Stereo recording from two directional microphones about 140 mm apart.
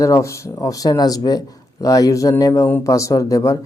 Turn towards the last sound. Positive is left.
turn(degrees=25)  # may be behind; listen again after turning